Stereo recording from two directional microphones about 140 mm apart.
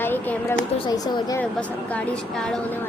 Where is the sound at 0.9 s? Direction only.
25° left (ahead or behind).